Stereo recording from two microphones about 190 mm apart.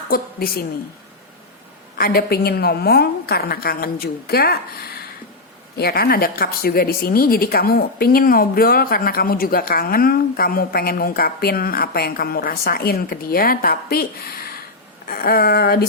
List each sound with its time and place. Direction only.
0.1 s a woman's voice: 50° left (ahead or behind)
2.0 s a woman's voice: 50° left (ahead or behind)
15.0 s a sound: 50° left (ahead or behind)